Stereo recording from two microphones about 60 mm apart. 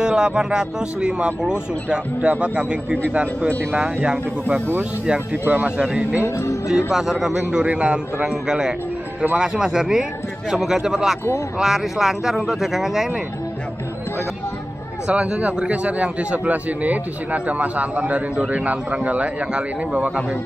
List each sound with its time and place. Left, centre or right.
0.0 s a man's voice: centre
5.4 s a man's voice: right
6.2 s speech: left
6.9 s speech: centre
7.6 s speech: centre
15.0 s a man's voice: centre